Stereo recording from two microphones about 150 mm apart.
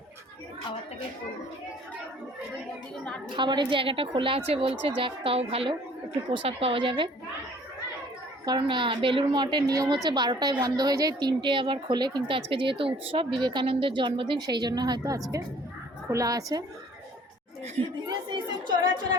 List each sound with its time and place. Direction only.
3.3 s a woman's voice: 30° right (ahead or behind)
8.4 s a woman's voice: 30° right (ahead or behind)
18.1 s a woman's voice: 30° right (ahead or behind)